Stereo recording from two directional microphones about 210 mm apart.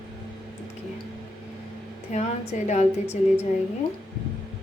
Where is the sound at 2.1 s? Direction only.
30° left (ahead or behind).